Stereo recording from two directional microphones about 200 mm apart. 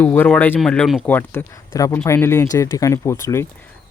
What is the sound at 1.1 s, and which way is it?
Speech, 10° left (ahead or behind).